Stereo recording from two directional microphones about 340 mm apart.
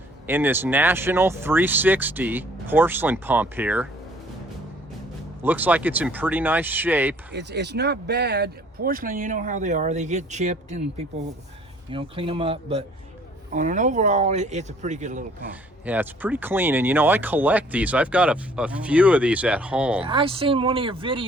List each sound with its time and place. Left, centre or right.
0.3 s speech: centre
5.4 s speech: centre
7.3 s speech: right
11.9 s speech: centre
15.9 s speech: centre
20.1 s speech: centre